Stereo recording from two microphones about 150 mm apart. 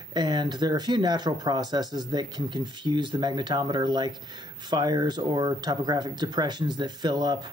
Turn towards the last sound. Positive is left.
turn(degrees=-30)  # may be behind; listen again after turning